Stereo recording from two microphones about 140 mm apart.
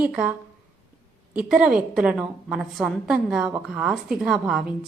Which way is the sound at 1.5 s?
5° right (ahead or behind).